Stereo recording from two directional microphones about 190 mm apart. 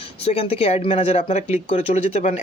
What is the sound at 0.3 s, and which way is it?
Speech, 30° left (ahead or behind).